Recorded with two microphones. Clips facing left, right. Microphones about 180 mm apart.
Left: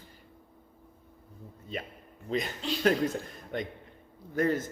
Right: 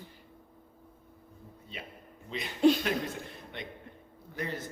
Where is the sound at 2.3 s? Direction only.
45° left (ahead or behind).